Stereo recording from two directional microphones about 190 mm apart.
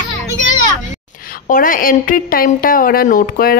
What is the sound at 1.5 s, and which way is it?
A woman's voice, 45° left (ahead or behind).